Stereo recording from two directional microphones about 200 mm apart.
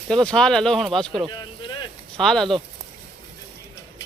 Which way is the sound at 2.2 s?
Centre (ahead or behind).